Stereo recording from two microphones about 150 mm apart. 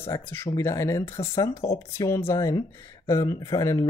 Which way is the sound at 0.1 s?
15° left (ahead or behind).